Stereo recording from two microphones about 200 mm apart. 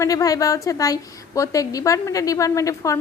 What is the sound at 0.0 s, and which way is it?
A woman's voice, 15° left (ahead or behind).